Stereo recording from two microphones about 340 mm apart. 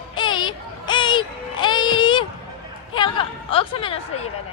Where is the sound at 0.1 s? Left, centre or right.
Centre.